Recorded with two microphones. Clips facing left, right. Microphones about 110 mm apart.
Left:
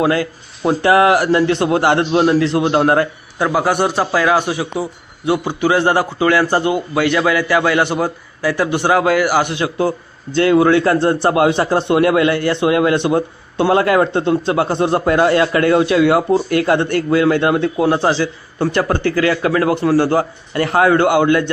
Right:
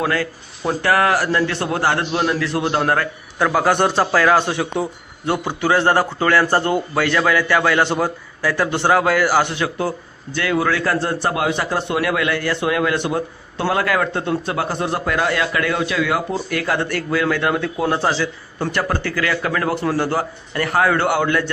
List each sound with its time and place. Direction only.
0.0 s a man's voice: 15° left (ahead or behind)